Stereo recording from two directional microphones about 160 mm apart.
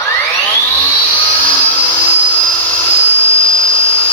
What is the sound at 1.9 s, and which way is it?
Vacuum cleaner, 15° left (ahead or behind).